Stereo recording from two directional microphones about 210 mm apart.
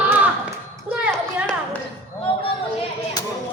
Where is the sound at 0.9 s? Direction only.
5° right (ahead or behind).